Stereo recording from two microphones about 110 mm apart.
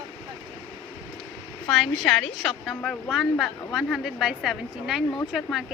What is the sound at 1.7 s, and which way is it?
A woman's voice, 5° left (ahead or behind).